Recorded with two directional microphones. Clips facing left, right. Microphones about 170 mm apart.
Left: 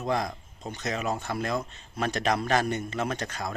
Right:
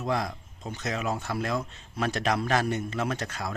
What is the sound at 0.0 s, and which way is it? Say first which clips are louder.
Speech: left 1 dB; centre (ahead or behind).